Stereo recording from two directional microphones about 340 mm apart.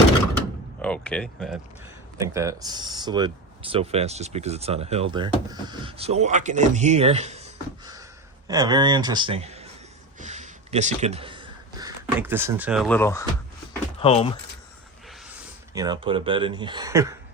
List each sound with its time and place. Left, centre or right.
0.3 s door: centre
2.2 s speech: centre
10.2 s a sound: right
12.2 s speech: centre
15.7 s speech: centre